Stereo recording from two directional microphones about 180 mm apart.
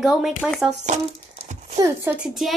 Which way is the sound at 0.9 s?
40° right (ahead or behind).